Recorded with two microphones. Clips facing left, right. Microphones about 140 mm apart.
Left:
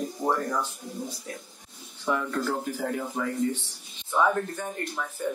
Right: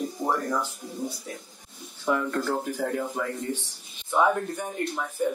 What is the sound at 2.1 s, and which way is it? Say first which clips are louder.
Speech: right 2 dB; 10° right (ahead or behind).